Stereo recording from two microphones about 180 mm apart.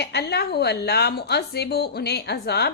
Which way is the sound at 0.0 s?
65° left (ahead or behind).